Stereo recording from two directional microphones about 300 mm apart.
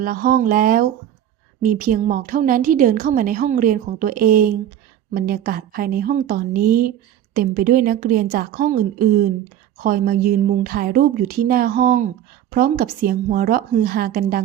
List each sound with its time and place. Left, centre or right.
0.0 s a woman's voice: right